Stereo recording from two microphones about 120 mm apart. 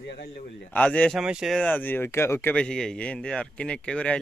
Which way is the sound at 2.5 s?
5° left (ahead or behind).